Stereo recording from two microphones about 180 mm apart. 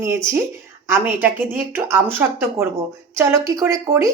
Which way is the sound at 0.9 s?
10° right (ahead or behind).